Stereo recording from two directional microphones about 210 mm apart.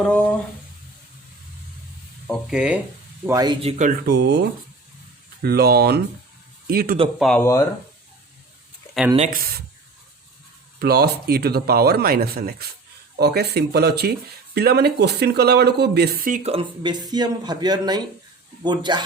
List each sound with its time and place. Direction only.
2.2 s speech: centre (ahead or behind)
3.2 s speech: 20° right (ahead or behind)
4.0 s speech: 50° right (ahead or behind)
7.2 s speech: 5° left (ahead or behind)
7.4 s speech: 15° left (ahead or behind)
9.1 s speech: 40° right (ahead or behind)
10.8 s speech: 50° right (ahead or behind); by 19.0 s 20° right (ahead or behind)